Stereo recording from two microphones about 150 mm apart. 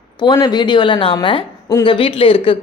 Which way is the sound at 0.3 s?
30° left (ahead or behind).